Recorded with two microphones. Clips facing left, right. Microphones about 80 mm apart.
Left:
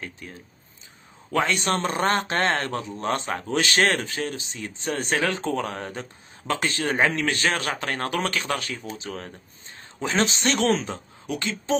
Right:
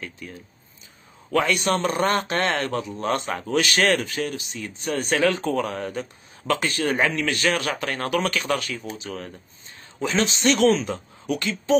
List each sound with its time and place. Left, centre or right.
0.0 s speech: left
10.7 s speech: left